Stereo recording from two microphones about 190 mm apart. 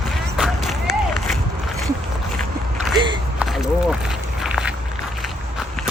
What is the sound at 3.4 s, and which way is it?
Walk, centre (ahead or behind).